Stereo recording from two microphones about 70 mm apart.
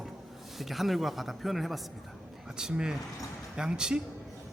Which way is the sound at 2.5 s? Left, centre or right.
Centre.